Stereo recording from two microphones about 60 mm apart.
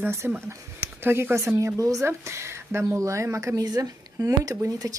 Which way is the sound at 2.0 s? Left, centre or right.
Right.